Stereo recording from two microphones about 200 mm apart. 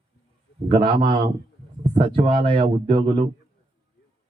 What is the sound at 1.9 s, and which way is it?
A man's voice, 25° right (ahead or behind).